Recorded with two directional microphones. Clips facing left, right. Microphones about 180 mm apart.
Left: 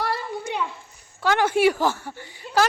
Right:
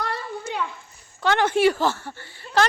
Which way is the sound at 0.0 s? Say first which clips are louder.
Left 2 dB; 10° left (ahead or behind).